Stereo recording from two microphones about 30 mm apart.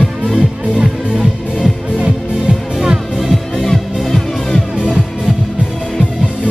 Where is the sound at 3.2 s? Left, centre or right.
Centre.